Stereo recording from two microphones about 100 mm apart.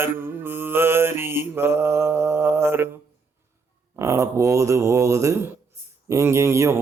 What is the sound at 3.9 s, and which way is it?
Speech, 30° right (ahead or behind).